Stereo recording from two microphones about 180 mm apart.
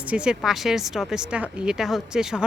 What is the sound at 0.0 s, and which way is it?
Speech, 5° right (ahead or behind).